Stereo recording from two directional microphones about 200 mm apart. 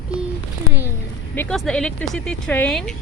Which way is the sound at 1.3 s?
10° left (ahead or behind).